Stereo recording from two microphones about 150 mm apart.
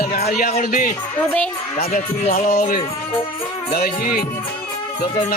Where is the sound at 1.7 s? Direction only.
60° left (ahead or behind); by 3.9 s 75° left (ahead or behind).